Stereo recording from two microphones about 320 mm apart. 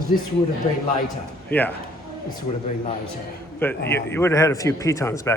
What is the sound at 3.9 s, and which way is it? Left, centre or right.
A man's voice, centre.